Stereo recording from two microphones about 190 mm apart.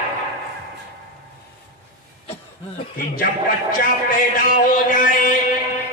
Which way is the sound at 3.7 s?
45° left (ahead or behind).